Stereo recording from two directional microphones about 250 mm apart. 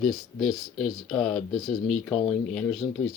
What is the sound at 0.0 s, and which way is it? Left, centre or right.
Speech, centre.